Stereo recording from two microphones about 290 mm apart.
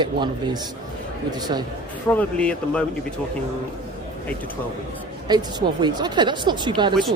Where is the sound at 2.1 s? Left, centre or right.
Centre.